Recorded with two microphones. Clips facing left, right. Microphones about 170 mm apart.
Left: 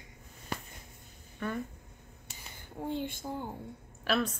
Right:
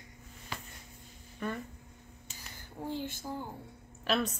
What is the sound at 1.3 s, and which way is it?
Speech, centre (ahead or behind).